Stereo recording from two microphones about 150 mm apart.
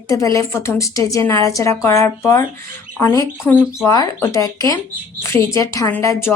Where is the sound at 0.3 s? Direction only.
15° left (ahead or behind).